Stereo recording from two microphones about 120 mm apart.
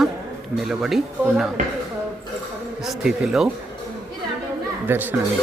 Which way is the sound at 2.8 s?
5° right (ahead or behind).